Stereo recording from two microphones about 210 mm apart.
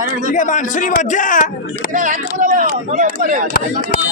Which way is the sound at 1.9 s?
40° right (ahead or behind).